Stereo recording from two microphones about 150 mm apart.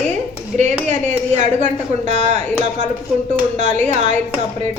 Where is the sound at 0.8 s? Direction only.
55° right (ahead or behind).